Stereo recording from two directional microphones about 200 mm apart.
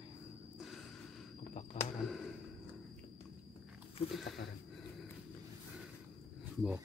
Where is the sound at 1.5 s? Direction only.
35° left (ahead or behind).